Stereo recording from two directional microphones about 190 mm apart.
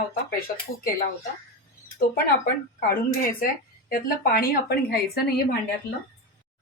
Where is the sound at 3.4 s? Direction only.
50° left (ahead or behind).